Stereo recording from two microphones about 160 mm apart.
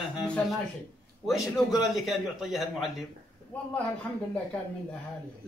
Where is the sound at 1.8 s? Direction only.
Centre (ahead or behind).